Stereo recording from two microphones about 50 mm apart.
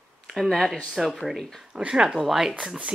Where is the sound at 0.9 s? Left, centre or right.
Centre.